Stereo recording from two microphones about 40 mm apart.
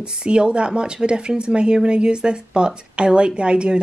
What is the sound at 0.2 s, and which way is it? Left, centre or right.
Speech, right.